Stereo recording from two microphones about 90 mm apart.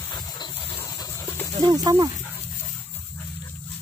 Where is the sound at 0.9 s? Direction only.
40° left (ahead or behind).